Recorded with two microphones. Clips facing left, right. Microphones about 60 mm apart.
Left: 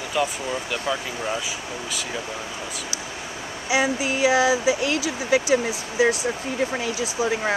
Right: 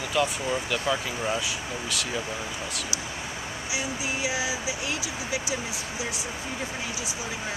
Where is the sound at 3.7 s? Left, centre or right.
Left.